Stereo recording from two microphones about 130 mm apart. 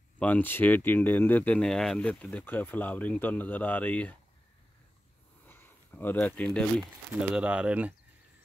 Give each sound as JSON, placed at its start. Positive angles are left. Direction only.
{"t": 0.2, "sound": "speech", "side_deg": 15}
{"t": 5.5, "sound": "a sound", "side_deg": 15}
{"t": 6.8, "sound": "speech", "side_deg": -5}